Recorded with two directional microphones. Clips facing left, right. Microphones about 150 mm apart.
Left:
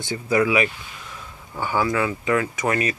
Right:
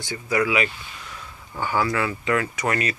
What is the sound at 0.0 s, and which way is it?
Speech, 25° left (ahead or behind).